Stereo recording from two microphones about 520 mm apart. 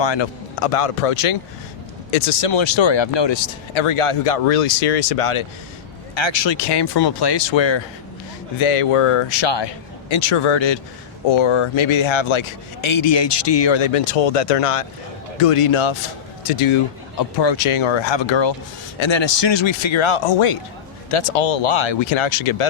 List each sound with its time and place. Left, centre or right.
0.0 s speech: left
0.7 s speech: left
2.0 s speech: left
6.1 s speech: left
8.5 s a man's voice: left
16.4 s speech: left
17.2 s a man's voice: left